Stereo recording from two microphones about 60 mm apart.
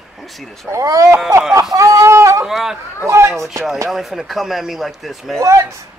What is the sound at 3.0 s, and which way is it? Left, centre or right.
Speech, right.